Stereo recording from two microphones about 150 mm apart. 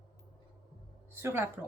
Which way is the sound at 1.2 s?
15° right (ahead or behind).